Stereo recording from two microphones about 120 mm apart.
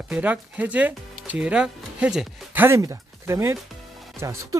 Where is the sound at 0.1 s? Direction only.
15° right (ahead or behind).